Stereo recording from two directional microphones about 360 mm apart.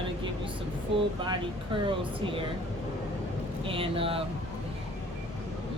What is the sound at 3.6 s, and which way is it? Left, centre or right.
Speech, centre.